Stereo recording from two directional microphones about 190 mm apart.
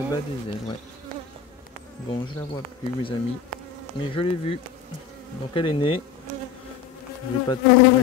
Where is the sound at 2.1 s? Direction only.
25° left (ahead or behind).